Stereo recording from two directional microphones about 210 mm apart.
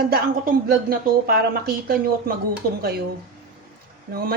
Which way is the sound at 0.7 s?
45° right (ahead or behind).